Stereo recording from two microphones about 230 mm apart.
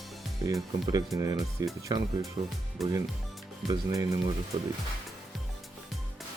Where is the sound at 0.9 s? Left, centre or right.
Centre.